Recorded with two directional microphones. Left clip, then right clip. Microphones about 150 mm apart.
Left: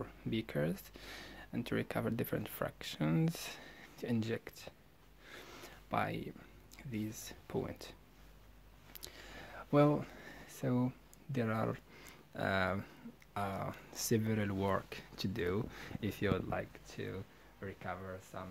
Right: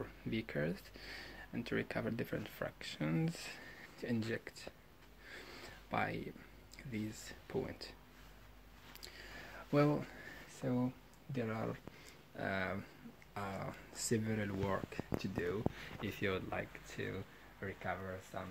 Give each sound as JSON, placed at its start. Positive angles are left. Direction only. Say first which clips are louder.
{"t": 0.0, "sound": "speech", "louder": "left 2 dB", "side_deg": 25}
{"t": 5.3, "sound": "a sound", "louder": "even", "side_deg": 25}
{"t": 7.2, "sound": "speech", "louder": "even", "side_deg": 30}
{"t": 9.0, "sound": "a sound", "louder": "left 1 dB", "side_deg": 35}
{"t": 10.5, "sound": "speech", "louder": "left 2 dB", "side_deg": 50}
{"t": 15.4, "sound": "speech", "louder": "left 1 dB", "side_deg": 75}
{"t": 16.4, "sound": "speech", "louder": "left 2 dB", "side_deg": 25}
{"t": 17.6, "sound": "speech", "louder": "right 2 dB", "side_deg": 5}